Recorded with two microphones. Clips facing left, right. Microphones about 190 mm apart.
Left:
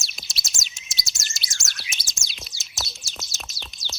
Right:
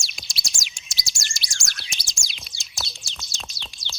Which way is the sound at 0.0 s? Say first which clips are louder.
Right 1 dB; centre (ahead or behind).